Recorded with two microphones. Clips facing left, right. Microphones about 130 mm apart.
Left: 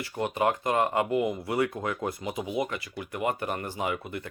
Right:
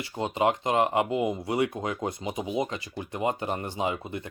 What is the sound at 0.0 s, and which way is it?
Speech, 20° right (ahead or behind).